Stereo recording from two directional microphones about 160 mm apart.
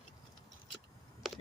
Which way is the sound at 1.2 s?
Centre (ahead or behind).